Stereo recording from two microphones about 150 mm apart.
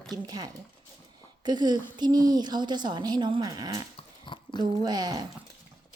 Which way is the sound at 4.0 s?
35° left (ahead or behind).